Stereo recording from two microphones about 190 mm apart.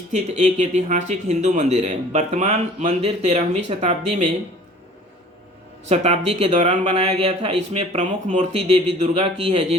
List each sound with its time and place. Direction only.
0.1 s speech: 35° right (ahead or behind)
5.9 s speech: 35° right (ahead or behind)